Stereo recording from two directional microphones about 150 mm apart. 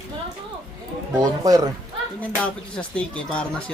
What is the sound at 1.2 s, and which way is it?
Speech, 25° right (ahead or behind).